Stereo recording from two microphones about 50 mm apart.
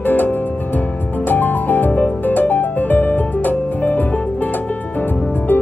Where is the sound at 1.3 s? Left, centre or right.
Left.